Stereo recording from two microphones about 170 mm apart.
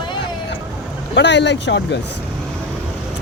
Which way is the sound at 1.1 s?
90° left.